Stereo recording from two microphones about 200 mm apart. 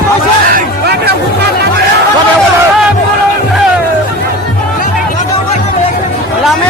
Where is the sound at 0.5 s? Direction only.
55° right (ahead or behind).